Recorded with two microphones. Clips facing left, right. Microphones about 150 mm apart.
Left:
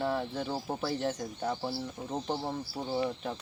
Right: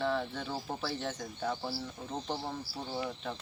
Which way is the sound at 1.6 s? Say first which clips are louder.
Left 3 dB; 25° left (ahead or behind).